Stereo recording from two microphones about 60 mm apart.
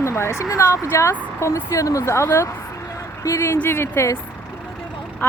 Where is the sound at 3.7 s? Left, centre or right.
Left.